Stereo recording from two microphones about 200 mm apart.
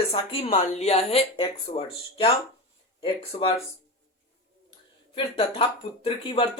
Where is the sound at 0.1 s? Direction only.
30° left (ahead or behind).